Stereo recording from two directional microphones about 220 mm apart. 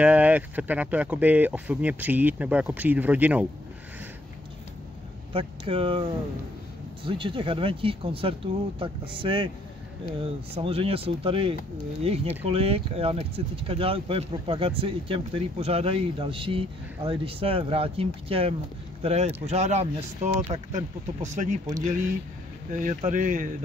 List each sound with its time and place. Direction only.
0.0 s speech: 5° right (ahead or behind)
5.3 s speech: 25° right (ahead or behind)
7.1 s speech: 20° right (ahead or behind)
10.5 s speech: 25° right (ahead or behind)
22.7 s speech: 35° right (ahead or behind)